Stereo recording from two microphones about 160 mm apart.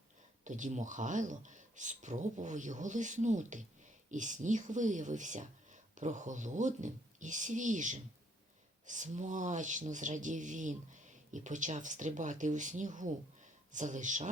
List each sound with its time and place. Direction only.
0.4 s speech: 50° right (ahead or behind)